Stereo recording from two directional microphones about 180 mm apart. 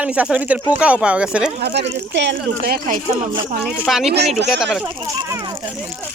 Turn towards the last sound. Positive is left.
turn(degrees=0)  # may be behind; listen again after turning